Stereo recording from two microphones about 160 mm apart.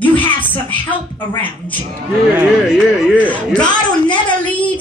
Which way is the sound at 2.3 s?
5° right (ahead or behind).